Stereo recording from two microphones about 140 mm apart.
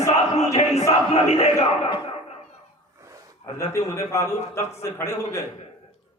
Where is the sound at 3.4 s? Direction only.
20° left (ahead or behind).